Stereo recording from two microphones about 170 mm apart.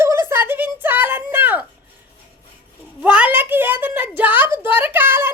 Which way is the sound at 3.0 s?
10° right (ahead or behind).